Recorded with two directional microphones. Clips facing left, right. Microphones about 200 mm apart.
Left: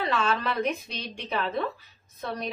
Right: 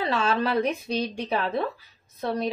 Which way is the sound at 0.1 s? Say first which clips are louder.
Right 6 dB; 35° right (ahead or behind).